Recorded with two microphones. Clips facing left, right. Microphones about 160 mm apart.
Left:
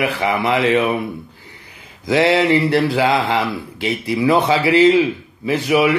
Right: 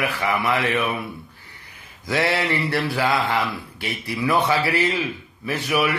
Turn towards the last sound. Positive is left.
turn(degrees=20)  # may be behind; listen again after turning